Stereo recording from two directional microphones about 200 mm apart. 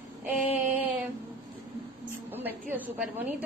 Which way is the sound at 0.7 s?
10° right (ahead or behind).